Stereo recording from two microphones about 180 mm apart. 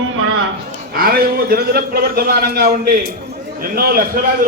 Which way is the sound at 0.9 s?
55° right (ahead or behind).